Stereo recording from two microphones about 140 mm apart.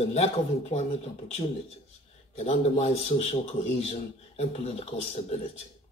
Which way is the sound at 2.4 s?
55° left (ahead or behind).